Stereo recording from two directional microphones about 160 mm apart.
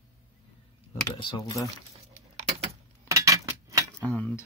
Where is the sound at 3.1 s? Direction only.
20° right (ahead or behind).